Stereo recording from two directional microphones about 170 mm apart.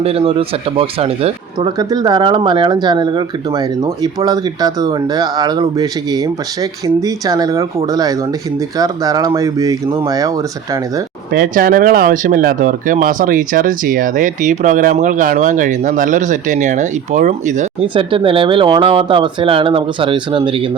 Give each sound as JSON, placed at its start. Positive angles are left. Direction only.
{"t": 0.0, "sound": "speech", "side_deg": -35}
{"t": 11.3, "sound": "speech", "side_deg": -60}
{"t": 17.9, "sound": "speech", "side_deg": -30}